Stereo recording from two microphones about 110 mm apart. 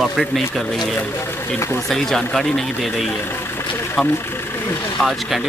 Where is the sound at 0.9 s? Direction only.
25° left (ahead or behind).